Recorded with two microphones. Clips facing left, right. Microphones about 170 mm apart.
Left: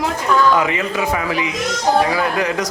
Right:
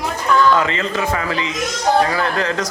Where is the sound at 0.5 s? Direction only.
15° left (ahead or behind).